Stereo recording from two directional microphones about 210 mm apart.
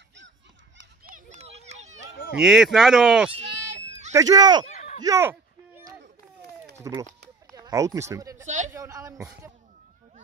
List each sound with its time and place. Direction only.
1.4 s children playing: 30° right (ahead or behind)
2.3 s speech: centre (ahead or behind)
3.4 s a sound: 55° right (ahead or behind)
4.1 s speech: 15° right (ahead or behind)
4.7 s a sound: 35° left (ahead or behind)
5.0 s speech: 10° right (ahead or behind)
6.8 s speech: 15° right (ahead or behind)
8.5 s a man's voice: 35° right (ahead or behind)
8.7 s speech: 15° right (ahead or behind)